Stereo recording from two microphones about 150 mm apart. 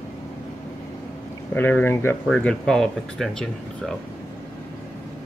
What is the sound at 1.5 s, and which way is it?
Speech, 15° left (ahead or behind).